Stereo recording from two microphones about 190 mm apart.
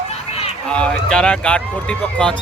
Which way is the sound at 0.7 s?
5° left (ahead or behind).